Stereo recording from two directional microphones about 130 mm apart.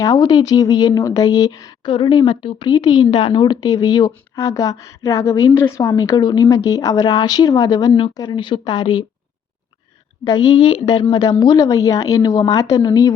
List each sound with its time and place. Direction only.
0.0 s speech: 30° left (ahead or behind)
1.9 s speech: 40° left (ahead or behind)
10.2 s speech: 35° left (ahead or behind)